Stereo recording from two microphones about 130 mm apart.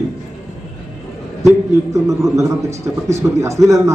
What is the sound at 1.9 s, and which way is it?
A man's voice, 25° right (ahead or behind).